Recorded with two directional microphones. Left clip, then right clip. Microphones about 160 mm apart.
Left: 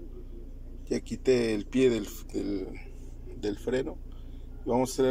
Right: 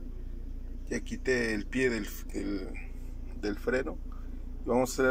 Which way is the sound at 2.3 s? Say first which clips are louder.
Left 3 dB; 35° left (ahead or behind).